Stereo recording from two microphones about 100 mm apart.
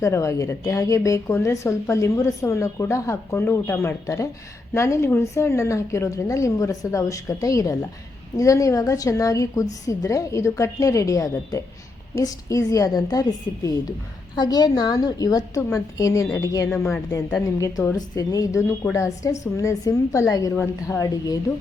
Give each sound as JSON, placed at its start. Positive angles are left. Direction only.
{"t": 0.0, "sound": "a woman's voice", "side_deg": 30}
{"t": 16.7, "sound": "a woman's voice", "side_deg": 25}
{"t": 17.6, "sound": "a woman's voice", "side_deg": 35}